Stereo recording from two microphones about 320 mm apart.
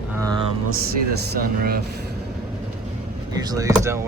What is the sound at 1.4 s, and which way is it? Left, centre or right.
Speech, right.